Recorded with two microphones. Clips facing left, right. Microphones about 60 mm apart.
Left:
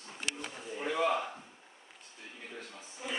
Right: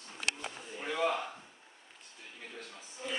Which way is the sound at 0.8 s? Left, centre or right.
Centre.